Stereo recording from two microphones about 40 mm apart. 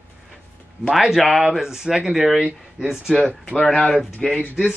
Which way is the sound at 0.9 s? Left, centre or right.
Centre.